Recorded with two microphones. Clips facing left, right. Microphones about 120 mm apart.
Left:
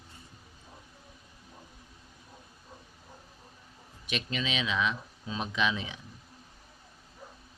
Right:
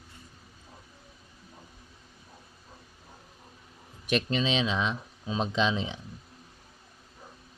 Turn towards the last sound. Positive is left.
turn(degrees=-25)  # may be behind; listen again after turning